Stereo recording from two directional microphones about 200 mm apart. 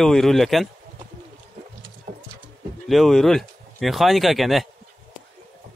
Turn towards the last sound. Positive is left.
turn(degrees=0)  # may be behind; listen again after turning